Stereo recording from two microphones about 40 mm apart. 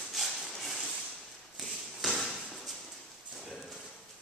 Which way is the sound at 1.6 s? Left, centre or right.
Centre.